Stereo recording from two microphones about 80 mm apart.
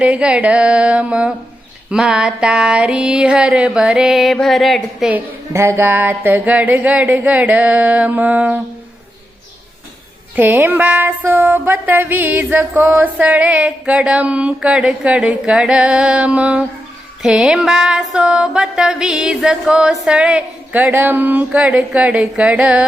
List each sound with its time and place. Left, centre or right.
0.0 s music: centre
5.1 s a sound: right
10.3 s music: right